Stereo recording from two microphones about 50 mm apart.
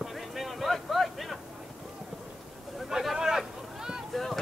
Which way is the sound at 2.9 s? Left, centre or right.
Centre.